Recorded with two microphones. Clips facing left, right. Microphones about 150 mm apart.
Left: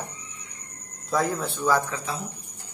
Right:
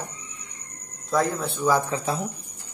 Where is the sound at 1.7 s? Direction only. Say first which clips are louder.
Right 1 dB; 20° right (ahead or behind).